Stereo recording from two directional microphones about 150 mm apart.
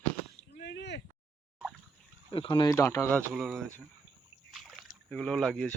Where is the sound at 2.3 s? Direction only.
35° left (ahead or behind).